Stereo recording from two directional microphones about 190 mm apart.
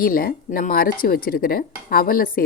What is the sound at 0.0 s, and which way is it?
Speech, 50° left (ahead or behind).